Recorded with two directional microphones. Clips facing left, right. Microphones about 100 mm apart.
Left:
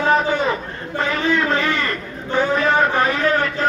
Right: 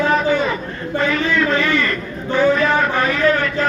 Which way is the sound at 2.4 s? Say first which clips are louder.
Right 2 dB; 25° left (ahead or behind).